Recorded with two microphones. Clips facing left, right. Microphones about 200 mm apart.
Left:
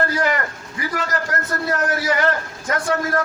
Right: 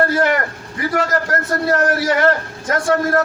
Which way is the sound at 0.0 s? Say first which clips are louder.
Right 5 dB; 65° right (ahead or behind).